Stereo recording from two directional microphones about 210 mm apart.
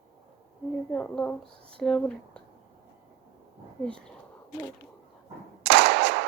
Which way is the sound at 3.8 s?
5° left (ahead or behind).